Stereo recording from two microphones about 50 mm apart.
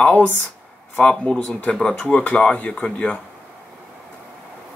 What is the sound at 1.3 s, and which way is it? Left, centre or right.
Speech, left.